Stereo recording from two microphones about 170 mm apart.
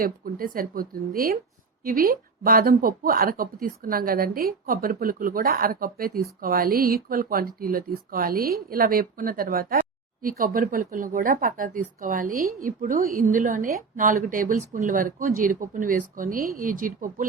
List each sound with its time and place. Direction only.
0.0 s speech: 55° right (ahead or behind)